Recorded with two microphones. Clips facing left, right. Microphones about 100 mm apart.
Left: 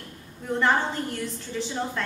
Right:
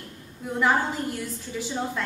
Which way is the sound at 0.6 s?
5° right (ahead or behind).